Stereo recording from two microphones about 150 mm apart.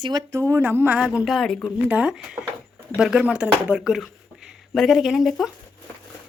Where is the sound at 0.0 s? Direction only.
25° right (ahead or behind); by 1.7 s 5° left (ahead or behind).